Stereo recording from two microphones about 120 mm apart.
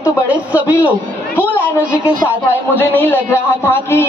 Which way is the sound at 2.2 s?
15° left (ahead or behind).